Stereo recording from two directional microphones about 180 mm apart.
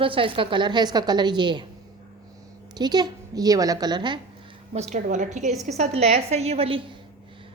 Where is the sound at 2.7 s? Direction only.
25° right (ahead or behind).